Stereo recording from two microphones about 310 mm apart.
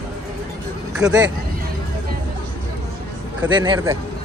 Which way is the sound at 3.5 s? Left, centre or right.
Centre.